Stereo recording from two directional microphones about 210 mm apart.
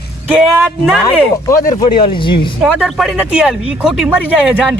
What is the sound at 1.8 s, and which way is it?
Speech, 25° left (ahead or behind).